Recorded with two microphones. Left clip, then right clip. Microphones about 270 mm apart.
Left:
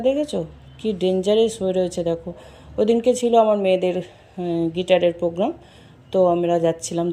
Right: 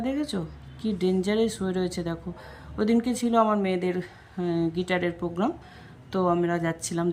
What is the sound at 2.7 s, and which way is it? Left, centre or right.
Speech, right.